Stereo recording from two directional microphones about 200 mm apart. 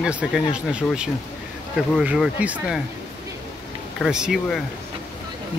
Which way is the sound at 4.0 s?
5° right (ahead or behind).